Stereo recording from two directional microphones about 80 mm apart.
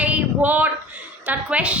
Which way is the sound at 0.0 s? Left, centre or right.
Centre.